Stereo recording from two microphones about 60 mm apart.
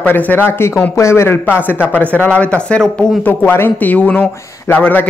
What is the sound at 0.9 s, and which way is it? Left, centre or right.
Speech, left.